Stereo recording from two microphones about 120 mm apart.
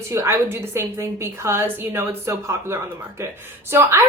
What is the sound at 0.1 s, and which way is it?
A woman's voice, 20° right (ahead or behind).